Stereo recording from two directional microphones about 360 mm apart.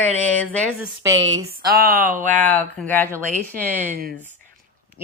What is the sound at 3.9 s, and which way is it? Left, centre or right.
Speech, right.